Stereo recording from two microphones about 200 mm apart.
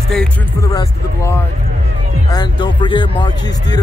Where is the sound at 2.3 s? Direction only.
20° left (ahead or behind).